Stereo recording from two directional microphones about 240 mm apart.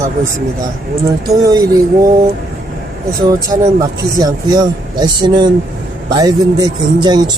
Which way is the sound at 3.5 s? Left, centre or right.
Centre.